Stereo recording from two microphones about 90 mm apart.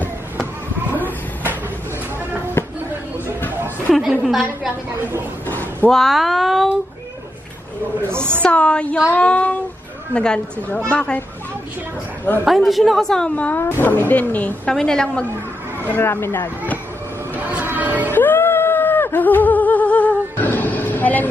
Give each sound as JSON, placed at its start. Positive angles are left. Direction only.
{"t": 3.9, "sound": "a woman's voice", "side_deg": 0}
{"t": 5.5, "sound": "a sound", "side_deg": 20}
{"t": 5.9, "sound": "a woman's voice", "side_deg": 5}
{"t": 8.0, "sound": "a woman's voice", "side_deg": -25}
{"t": 8.4, "sound": "a woman's voice", "side_deg": 15}
{"t": 12.4, "sound": "a woman's voice", "side_deg": 0}
{"t": 13.6, "sound": "speech", "side_deg": 25}
{"t": 14.7, "sound": "a woman's voice", "side_deg": 5}
{"t": 15.8, "sound": "speech", "side_deg": 25}
{"t": 17.4, "sound": "a sound", "side_deg": -20}
{"t": 18.1, "sound": "a sound", "side_deg": 20}